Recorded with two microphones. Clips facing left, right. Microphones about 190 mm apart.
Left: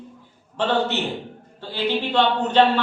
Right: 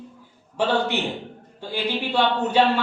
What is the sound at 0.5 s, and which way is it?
Speech, 10° right (ahead or behind).